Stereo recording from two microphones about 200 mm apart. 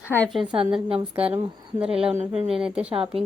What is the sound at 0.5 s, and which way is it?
Speech, 25° right (ahead or behind).